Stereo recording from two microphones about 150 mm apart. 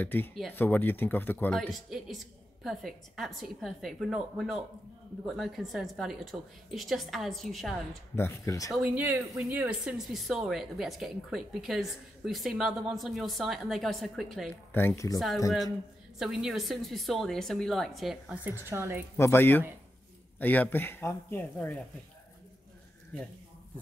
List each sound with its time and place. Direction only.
0.0 s speech: 15° left (ahead or behind)
1.7 s speech: centre (ahead or behind)
8.2 s speech: 20° left (ahead or behind)
8.7 s speech: 10° right (ahead or behind)
14.7 s speech: 15° left (ahead or behind)
15.1 s speech: centre (ahead or behind)
18.4 s speech: 15° right (ahead or behind)
19.1 s speech: 15° left (ahead or behind)